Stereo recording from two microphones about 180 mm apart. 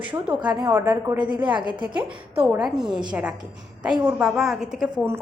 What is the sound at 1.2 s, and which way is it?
Speech, 25° right (ahead or behind).